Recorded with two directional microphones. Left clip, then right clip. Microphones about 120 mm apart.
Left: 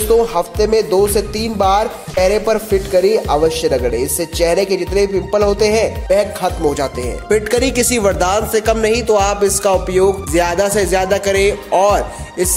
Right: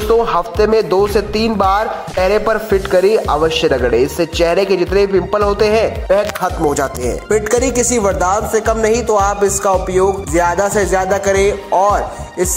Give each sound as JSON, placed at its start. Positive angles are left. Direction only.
{"t": 0.1, "sound": "speech", "side_deg": 0}
{"t": 6.4, "sound": "speech", "side_deg": -15}
{"t": 7.5, "sound": "a man's voice", "side_deg": 20}